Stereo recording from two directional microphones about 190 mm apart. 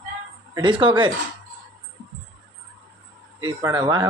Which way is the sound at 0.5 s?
25° right (ahead or behind).